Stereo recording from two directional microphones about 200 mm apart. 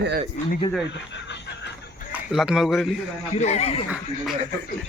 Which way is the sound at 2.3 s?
Centre (ahead or behind).